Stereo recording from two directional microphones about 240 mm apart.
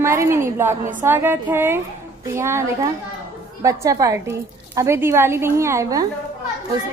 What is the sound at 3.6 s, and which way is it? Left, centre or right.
A woman's voice, centre.